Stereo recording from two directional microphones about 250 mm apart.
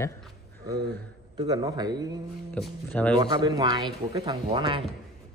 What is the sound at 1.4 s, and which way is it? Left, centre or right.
Speech, centre.